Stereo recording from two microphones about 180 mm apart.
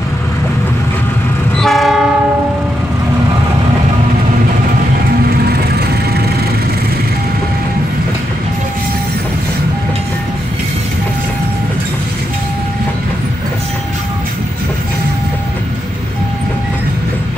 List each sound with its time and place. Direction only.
1.6 s train: centre (ahead or behind)
5.2 s train: 60° right (ahead or behind)